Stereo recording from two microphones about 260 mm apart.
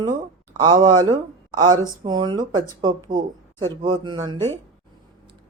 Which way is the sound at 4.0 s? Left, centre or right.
Centre.